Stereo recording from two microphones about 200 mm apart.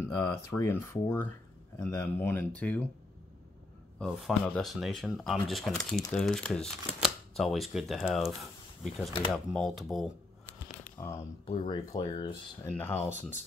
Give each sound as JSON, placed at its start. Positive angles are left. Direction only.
{"t": 0.0, "sound": "speech", "side_deg": 15}
{"t": 4.0, "sound": "speech", "side_deg": 0}
{"t": 11.0, "sound": "speech", "side_deg": 15}
{"t": 11.4, "sound": "speech", "side_deg": 30}
{"t": 12.6, "sound": "speech", "side_deg": 10}